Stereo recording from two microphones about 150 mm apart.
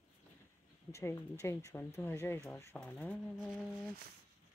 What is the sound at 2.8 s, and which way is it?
Speech, 5° left (ahead or behind).